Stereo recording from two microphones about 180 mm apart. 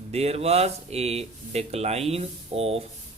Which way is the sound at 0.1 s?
35° right (ahead or behind).